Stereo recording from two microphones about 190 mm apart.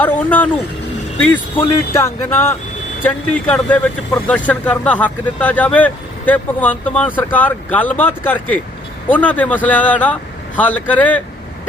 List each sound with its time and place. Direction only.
0.0 s speech: 10° left (ahead or behind)